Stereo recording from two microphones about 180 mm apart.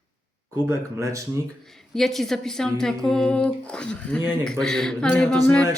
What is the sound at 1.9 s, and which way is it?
Speech, centre (ahead or behind).